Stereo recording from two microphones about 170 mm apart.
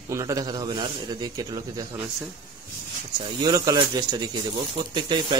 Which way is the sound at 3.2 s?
25° right (ahead or behind).